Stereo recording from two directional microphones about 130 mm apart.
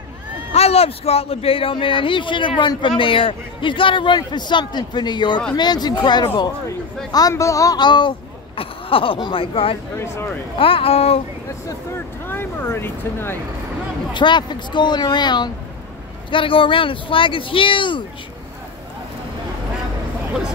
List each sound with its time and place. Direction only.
0.5 s a man's voice: 50° left (ahead or behind)
9.9 s speech: 20° left (ahead or behind)
10.6 s speech: 45° left (ahead or behind)
11.6 s speech: 20° left (ahead or behind)
14.1 s a man's voice: 35° left (ahead or behind)